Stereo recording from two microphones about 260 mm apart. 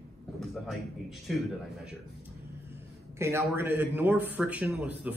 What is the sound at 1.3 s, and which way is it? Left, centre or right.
Speech, centre.